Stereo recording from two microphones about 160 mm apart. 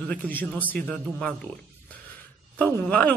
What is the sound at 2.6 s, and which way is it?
Speech, 10° left (ahead or behind).